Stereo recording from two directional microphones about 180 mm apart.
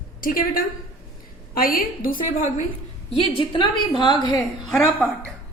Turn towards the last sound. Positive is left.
turn(degrees=0)  # may be behind; listen again after turning